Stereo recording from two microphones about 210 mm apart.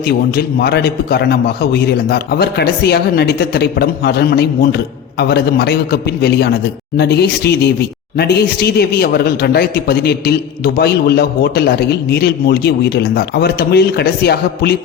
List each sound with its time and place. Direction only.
0.0 s speech: 50° left (ahead or behind)